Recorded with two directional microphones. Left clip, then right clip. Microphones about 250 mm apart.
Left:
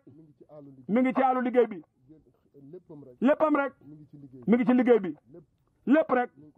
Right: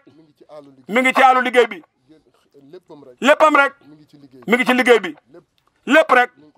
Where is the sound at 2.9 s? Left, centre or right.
Right.